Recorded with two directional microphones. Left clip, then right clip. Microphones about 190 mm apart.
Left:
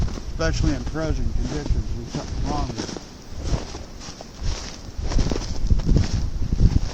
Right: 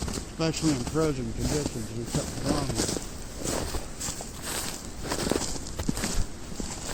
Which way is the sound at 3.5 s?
60° right (ahead or behind).